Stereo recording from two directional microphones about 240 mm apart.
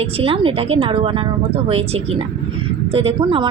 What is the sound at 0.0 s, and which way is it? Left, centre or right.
Speech, right.